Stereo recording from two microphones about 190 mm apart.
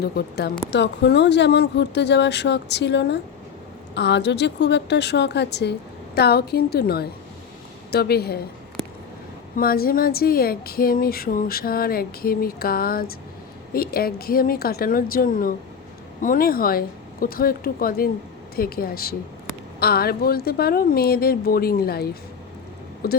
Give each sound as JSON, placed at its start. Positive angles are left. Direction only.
{"t": 0.0, "sound": "speech", "side_deg": 60}
{"t": 9.6, "sound": "speech", "side_deg": 50}